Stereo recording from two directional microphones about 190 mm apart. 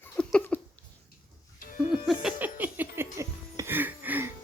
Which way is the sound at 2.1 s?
5° right (ahead or behind).